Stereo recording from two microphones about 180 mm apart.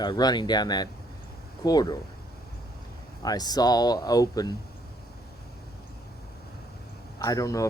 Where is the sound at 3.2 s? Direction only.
20° left (ahead or behind).